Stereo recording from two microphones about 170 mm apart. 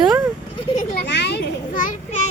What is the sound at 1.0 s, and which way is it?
Children playing, 85° left.